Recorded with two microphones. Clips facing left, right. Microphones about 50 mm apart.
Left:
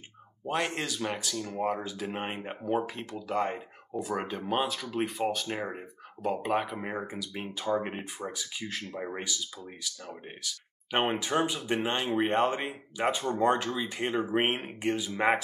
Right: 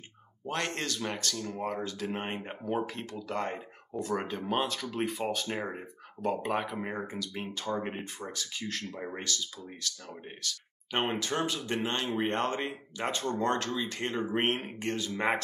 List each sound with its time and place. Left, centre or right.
0.5 s speech: centre